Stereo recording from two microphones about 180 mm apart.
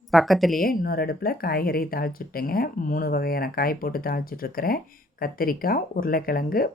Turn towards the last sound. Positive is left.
turn(degrees=55)  # may be behind; listen again after turning